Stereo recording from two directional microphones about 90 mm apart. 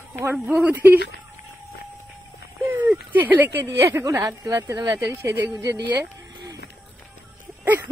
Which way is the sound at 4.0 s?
35° right (ahead or behind).